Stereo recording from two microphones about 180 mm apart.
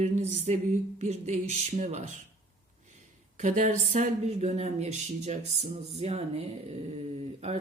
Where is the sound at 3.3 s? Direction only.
45° right (ahead or behind).